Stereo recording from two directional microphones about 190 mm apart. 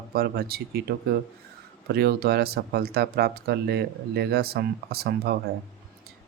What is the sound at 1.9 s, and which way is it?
Speech, 55° right (ahead or behind).